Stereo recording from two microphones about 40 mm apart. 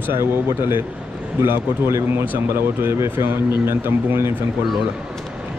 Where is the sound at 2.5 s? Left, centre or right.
Right.